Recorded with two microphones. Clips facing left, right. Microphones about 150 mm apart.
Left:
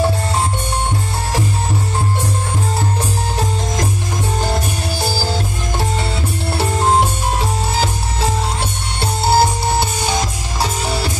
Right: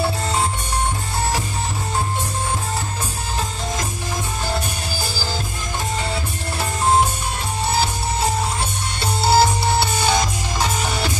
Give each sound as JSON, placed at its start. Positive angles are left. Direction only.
{"t": 9.0, "sound": "music", "side_deg": 50}